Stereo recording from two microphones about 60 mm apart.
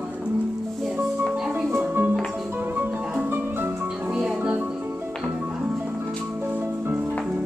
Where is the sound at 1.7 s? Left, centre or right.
Right.